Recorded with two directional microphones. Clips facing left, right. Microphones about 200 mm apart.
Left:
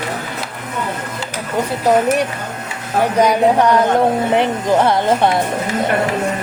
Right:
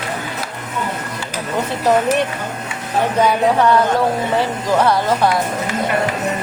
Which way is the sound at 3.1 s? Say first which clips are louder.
Left 2 dB; 15° left (ahead or behind).